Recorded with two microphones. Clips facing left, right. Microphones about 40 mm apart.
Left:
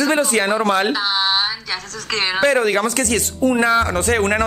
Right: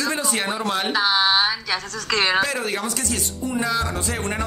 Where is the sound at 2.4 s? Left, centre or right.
Left.